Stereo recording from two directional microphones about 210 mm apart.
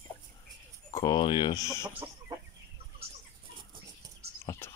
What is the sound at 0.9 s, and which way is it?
Speech, 20° left (ahead or behind).